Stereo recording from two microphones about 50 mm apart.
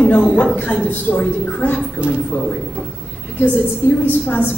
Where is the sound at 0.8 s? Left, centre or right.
Left.